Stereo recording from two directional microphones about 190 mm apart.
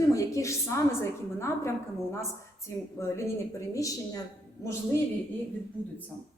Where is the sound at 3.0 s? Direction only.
15° left (ahead or behind).